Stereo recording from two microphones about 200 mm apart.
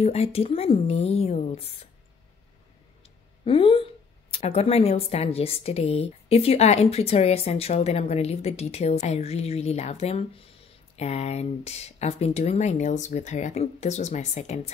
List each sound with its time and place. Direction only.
0.0 s a woman's voice: 30° left (ahead or behind)
3.0 s a sound: 25° left (ahead or behind)
4.3 s a woman's voice: 30° left (ahead or behind)